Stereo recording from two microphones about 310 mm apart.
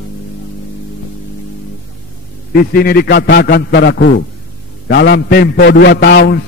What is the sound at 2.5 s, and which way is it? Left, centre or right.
A man's voice, left.